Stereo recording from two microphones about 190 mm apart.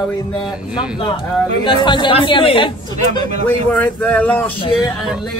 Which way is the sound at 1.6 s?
25° left (ahead or behind).